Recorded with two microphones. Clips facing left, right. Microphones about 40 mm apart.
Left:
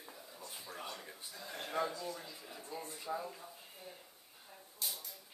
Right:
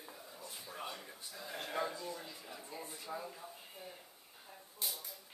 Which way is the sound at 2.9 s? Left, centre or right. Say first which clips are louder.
Left 4 dB; centre.